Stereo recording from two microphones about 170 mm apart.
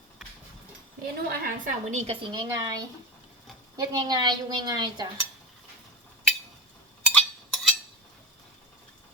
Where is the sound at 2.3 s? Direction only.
25° right (ahead or behind).